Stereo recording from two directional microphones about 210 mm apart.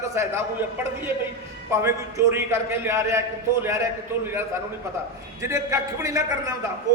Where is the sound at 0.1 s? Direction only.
15° right (ahead or behind).